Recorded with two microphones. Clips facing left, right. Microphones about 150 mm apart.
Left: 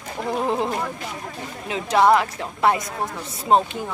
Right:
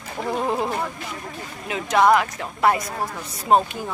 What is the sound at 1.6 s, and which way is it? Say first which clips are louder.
A woman's voice: even; 30° left (ahead or behind).